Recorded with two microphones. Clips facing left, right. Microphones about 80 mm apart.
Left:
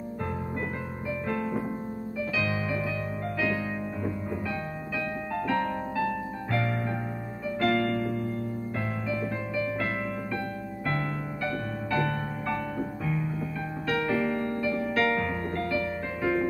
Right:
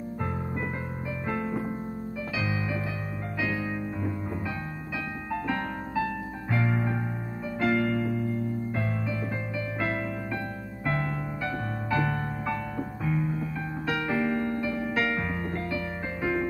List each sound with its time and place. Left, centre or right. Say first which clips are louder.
1.2 s music: even; centre
5.3 s music: left 2 dB; centre
6.5 s keyboard: right 2 dB; centre
10.9 s music: right 2 dB; centre